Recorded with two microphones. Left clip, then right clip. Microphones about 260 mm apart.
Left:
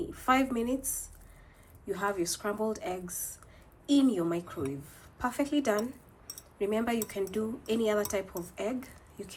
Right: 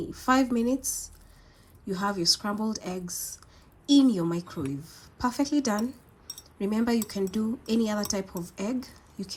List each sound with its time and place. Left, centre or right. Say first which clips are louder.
0.1 s speech: right 3 dB; right
1.9 s speech: right 5 dB; right